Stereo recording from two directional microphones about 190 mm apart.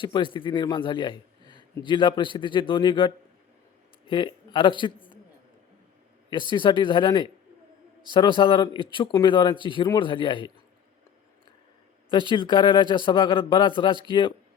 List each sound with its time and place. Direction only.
0.0 s a man's voice: 25° left (ahead or behind)
4.1 s speech: 25° left (ahead or behind)
6.5 s a man's voice: 25° left (ahead or behind)
12.0 s a man's voice: 25° left (ahead or behind)